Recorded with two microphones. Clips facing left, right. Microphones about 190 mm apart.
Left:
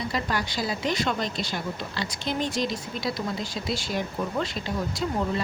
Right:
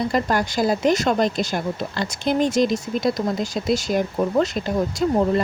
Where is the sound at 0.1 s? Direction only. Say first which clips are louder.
Right 7 dB; 45° right (ahead or behind).